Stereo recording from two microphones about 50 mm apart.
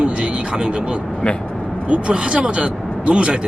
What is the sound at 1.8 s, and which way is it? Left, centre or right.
Speech, right.